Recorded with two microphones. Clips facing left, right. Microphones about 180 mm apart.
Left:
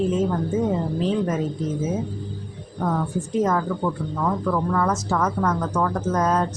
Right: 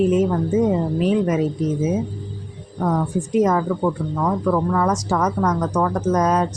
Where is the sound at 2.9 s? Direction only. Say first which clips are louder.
Right 5 dB; 15° right (ahead or behind).